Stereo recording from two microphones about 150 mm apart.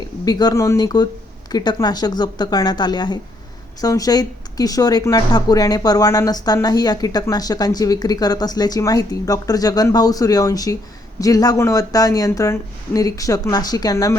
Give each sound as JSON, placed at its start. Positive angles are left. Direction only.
{"t": 0.3, "sound": "speech", "side_deg": 25}